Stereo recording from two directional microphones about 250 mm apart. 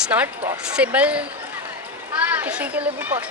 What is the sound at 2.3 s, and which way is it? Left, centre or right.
Speech, centre.